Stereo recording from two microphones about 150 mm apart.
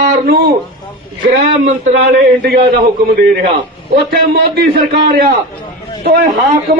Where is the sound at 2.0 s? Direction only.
90° right.